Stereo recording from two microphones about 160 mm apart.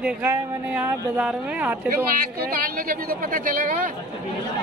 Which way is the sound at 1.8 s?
65° right (ahead or behind).